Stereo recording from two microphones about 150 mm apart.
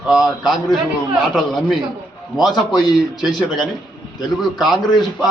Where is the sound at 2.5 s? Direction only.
30° left (ahead or behind).